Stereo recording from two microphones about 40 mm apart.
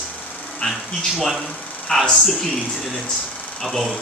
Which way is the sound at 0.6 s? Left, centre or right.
Left.